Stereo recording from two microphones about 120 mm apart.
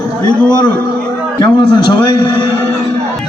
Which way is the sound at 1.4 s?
40° left (ahead or behind).